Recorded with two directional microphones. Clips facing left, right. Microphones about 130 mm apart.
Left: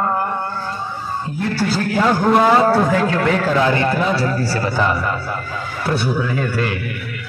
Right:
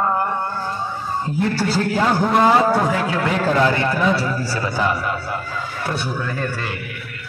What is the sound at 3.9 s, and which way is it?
Speech, 30° left (ahead or behind).